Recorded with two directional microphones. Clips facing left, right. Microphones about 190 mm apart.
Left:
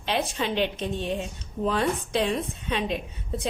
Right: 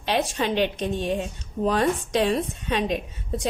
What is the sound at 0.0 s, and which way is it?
A woman's voice, 45° right (ahead or behind).